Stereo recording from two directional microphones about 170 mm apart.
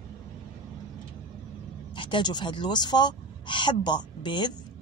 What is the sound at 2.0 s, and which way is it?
A woman's voice, 30° left (ahead or behind).